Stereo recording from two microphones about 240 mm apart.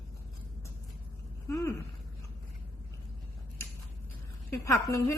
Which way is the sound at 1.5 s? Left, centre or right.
Centre.